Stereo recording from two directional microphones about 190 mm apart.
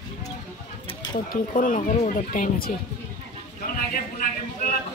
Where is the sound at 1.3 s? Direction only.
45° left (ahead or behind).